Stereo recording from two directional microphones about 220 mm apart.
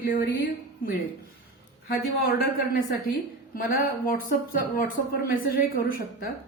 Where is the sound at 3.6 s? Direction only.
40° left (ahead or behind).